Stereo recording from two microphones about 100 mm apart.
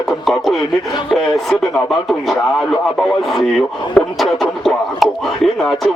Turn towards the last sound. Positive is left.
turn(degrees=0)  # may be behind; listen again after turning